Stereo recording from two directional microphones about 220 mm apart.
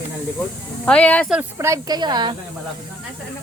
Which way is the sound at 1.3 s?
10° right (ahead or behind).